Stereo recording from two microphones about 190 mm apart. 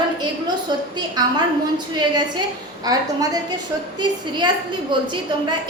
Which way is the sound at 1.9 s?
25° right (ahead or behind).